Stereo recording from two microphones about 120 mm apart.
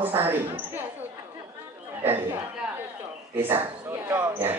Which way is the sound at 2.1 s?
15° right (ahead or behind).